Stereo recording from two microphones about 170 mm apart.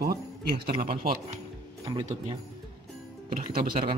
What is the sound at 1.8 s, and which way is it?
Speech, 30° right (ahead or behind).